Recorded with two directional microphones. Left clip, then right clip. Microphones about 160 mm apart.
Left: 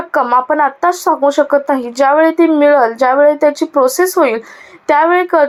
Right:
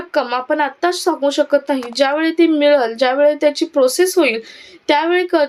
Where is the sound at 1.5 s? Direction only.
20° right (ahead or behind).